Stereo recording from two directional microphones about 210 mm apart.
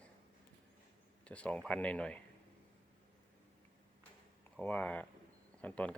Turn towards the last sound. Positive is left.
turn(degrees=5)  # may be behind; listen again after turning